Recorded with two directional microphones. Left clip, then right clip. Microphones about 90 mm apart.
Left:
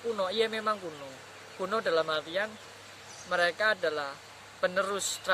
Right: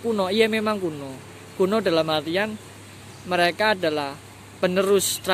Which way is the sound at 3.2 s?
10° left (ahead or behind).